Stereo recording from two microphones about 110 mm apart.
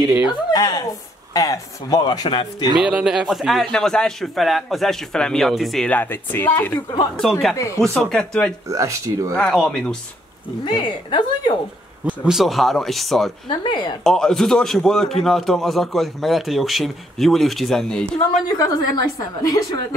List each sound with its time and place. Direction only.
0.2 s speech: 40° left (ahead or behind)
2.8 s a man's voice: 10° right (ahead or behind)
5.9 s speech: 15° left (ahead or behind)
7.2 s a man's voice: 5° left (ahead or behind)
7.5 s speech: 30° left (ahead or behind)
7.8 s a man's voice: 5° left (ahead or behind)
8.6 s speech: 30° right (ahead or behind)
9.3 s speech: 5° left (ahead or behind)
10.6 s a woman's voice: 45° left (ahead or behind)
12.0 s a man's voice: 10° right (ahead or behind)
13.5 s a woman's voice: 45° left (ahead or behind)
14.0 s a man's voice: 5° left (ahead or behind)
18.5 s speech: 35° left (ahead or behind)